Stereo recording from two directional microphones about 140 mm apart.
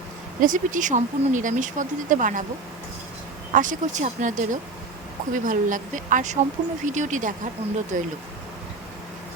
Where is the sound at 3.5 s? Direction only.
70° right (ahead or behind).